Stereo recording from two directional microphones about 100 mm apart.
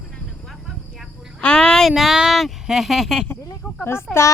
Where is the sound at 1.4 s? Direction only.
10° left (ahead or behind).